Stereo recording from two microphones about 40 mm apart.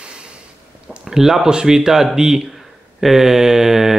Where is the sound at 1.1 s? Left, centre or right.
Centre.